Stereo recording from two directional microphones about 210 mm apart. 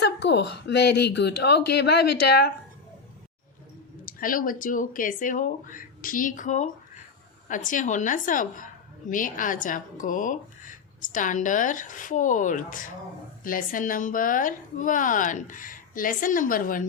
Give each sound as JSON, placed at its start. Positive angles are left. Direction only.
{"t": 0.0, "sound": "speech", "side_deg": 55}
{"t": 4.0, "sound": "a woman's voice", "side_deg": 40}